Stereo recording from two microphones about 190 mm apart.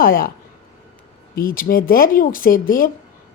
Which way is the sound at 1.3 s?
50° left (ahead or behind).